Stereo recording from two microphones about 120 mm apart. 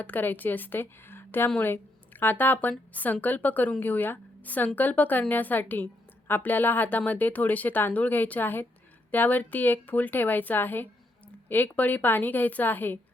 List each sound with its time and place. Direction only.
0.0 s a woman's voice: 15° left (ahead or behind)